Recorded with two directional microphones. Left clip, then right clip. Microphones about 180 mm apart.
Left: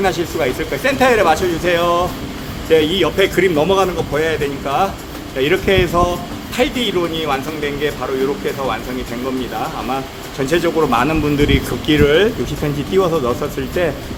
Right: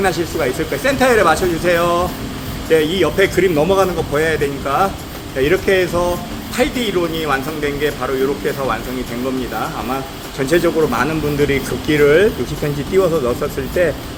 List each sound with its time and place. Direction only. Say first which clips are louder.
0.0 s speech: even; 20° left (ahead or behind)
10.4 s speech: right 1 dB; 20° left (ahead or behind)